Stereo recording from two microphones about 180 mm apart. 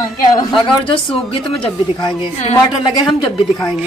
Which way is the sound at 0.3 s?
25° left (ahead or behind).